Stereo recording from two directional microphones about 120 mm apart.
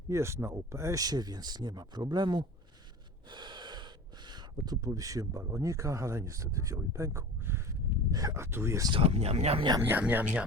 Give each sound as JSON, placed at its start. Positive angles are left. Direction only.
{"t": 0.1, "sound": "speech", "side_deg": -20}
{"t": 3.2, "sound": "gasp", "side_deg": -40}
{"t": 4.6, "sound": "speech", "side_deg": -30}
{"t": 8.9, "sound": "speech", "side_deg": -55}
{"t": 9.8, "sound": "speech", "side_deg": -15}